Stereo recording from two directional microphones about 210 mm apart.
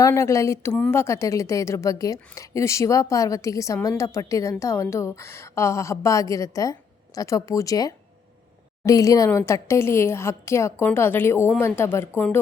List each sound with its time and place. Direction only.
0.0 s a woman's voice: 15° left (ahead or behind)